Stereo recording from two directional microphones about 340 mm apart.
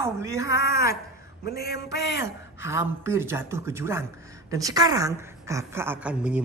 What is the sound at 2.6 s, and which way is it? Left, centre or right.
A woman's voice, centre.